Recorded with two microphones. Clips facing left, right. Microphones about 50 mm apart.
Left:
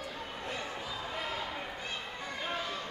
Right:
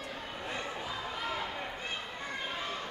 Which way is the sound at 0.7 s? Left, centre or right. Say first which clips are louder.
Right 1 dB; centre.